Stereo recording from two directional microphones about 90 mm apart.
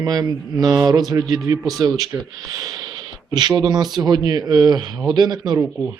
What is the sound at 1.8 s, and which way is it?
Speech, 50° right (ahead or behind).